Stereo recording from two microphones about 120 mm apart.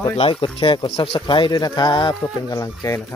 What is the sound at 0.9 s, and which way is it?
Speech, 55° left (ahead or behind).